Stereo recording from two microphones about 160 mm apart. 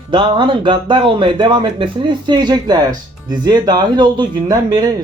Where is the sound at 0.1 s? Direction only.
30° right (ahead or behind).